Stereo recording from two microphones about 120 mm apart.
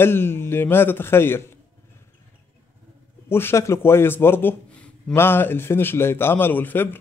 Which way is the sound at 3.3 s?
20° left (ahead or behind).